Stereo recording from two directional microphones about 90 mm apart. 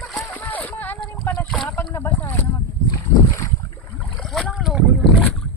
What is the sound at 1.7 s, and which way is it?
Boat, 25° left (ahead or behind).